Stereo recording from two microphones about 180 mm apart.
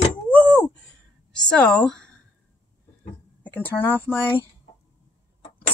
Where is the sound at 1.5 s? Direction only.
5° left (ahead or behind).